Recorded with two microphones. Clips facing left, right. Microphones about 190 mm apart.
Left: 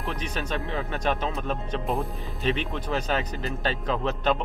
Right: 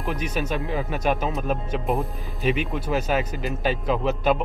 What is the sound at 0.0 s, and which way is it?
Speech, 10° right (ahead or behind).